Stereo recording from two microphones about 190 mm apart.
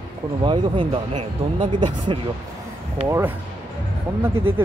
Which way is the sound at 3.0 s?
15° right (ahead or behind).